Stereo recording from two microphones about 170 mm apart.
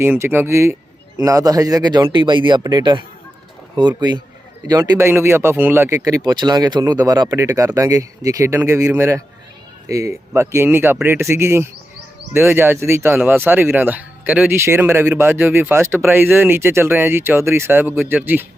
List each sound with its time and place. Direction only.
0.0 s speech: 15° right (ahead or behind)